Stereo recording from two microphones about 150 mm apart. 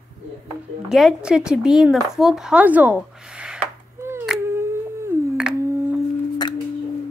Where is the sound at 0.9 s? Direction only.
5° right (ahead or behind).